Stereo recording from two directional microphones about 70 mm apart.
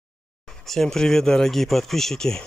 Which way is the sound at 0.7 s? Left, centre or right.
Centre.